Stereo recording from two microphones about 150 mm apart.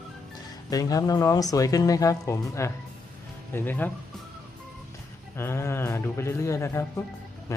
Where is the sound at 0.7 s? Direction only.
25° left (ahead or behind).